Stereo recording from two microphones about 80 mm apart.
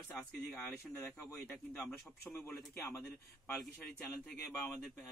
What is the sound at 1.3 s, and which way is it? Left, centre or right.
Speech, centre.